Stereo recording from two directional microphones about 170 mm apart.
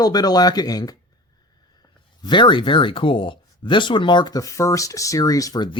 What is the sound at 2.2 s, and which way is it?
Speech, 30° left (ahead or behind).